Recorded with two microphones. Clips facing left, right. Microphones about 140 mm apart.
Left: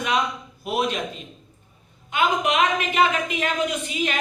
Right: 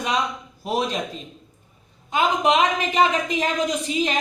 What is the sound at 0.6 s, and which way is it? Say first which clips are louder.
Speech: even; 35° right (ahead or behind).